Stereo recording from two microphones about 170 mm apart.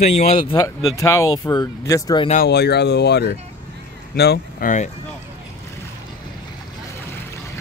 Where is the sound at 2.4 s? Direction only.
70° left (ahead or behind).